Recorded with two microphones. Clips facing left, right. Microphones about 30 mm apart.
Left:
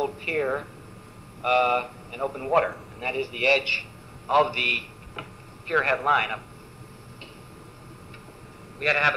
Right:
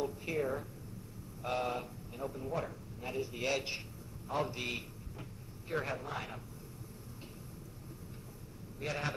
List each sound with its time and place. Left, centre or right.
0.0 s a man's voice: left
8.7 s a man's voice: left